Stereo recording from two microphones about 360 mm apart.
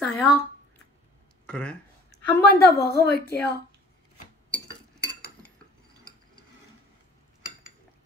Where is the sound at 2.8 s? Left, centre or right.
Left.